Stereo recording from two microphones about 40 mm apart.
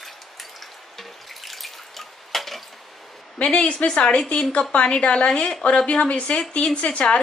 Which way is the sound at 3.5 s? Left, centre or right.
Left.